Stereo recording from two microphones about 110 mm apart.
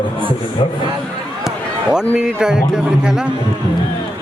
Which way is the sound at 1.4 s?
5° right (ahead or behind).